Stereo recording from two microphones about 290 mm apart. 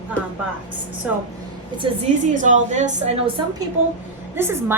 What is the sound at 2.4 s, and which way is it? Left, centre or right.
Speech, right.